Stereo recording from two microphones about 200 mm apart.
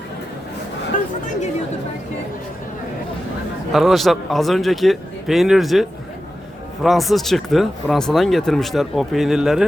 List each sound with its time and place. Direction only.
0.9 s chatter: 40° left (ahead or behind)
3.7 s speech: centre (ahead or behind)
6.8 s speech: centre (ahead or behind)